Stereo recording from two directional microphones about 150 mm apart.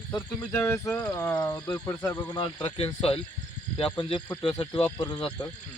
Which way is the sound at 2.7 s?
40° left (ahead or behind).